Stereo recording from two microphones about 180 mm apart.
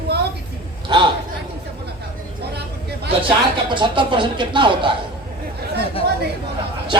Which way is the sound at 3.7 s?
25° right (ahead or behind).